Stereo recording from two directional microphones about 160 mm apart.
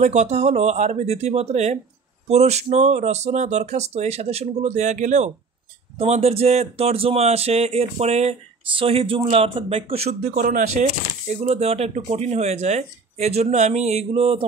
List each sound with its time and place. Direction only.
0.0 s speech: 45° right (ahead or behind)
10.4 s speech: 50° right (ahead or behind)